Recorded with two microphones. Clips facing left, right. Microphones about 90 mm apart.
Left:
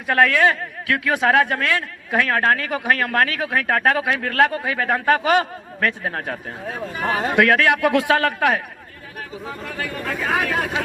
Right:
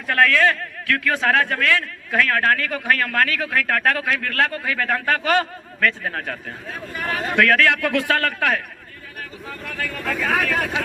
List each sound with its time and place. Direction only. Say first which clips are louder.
0.1 s a man's voice: left 1 dB; 15° left (ahead or behind)